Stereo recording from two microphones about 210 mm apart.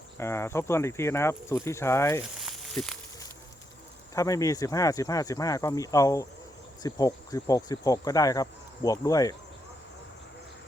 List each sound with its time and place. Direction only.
0.2 s speech: 10° left (ahead or behind)
2.4 s sizzle: centre (ahead or behind)
4.1 s speech: 15° left (ahead or behind)